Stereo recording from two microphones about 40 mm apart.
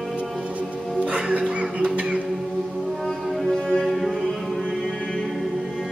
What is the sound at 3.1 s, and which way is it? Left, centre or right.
Music, centre.